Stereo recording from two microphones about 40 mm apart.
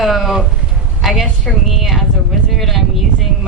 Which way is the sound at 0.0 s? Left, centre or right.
Centre.